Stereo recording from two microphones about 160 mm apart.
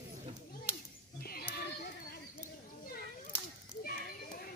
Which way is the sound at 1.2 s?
70° left (ahead or behind).